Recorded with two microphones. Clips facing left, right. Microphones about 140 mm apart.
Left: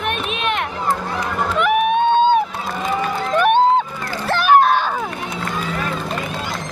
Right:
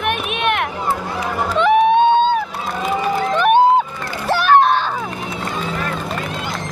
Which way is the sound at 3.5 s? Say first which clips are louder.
Right 3 dB; 10° right (ahead or behind).